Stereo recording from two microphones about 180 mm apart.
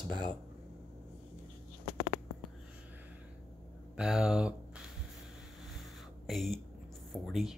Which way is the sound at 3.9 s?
5° right (ahead or behind).